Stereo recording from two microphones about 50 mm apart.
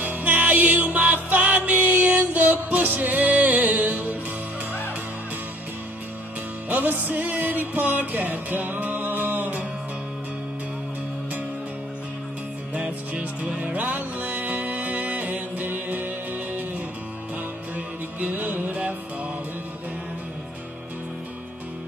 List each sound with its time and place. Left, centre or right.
0.0 s music: right
6.7 s music: right
12.7 s music: right
17.7 s music: right